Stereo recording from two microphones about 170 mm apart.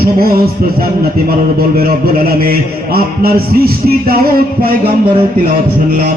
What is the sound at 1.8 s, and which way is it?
A man's voice, 60° right (ahead or behind).